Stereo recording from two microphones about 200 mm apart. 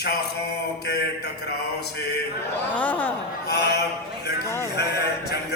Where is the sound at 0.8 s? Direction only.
55° left (ahead or behind).